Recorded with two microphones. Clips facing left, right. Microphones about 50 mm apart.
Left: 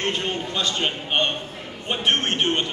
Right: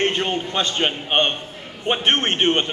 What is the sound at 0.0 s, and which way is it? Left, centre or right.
A man's voice, right.